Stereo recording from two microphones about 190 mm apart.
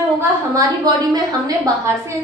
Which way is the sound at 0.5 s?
20° right (ahead or behind).